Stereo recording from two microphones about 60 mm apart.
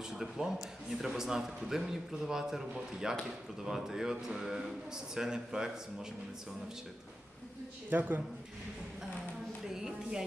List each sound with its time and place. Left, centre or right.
0.2 s a man's voice: centre
7.9 s a man's voice: right
9.7 s music: centre